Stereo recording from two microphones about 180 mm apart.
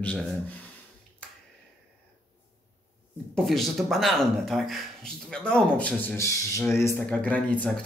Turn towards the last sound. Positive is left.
turn(degrees=5)  # may be behind; listen again after turning